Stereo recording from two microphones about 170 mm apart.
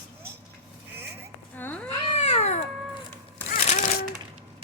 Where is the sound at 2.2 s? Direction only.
40° left (ahead or behind).